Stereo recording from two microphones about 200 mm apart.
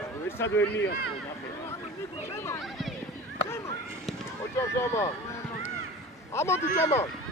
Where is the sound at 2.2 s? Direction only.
15° left (ahead or behind).